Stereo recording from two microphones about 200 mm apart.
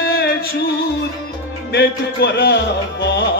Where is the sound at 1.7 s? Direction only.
55° left (ahead or behind).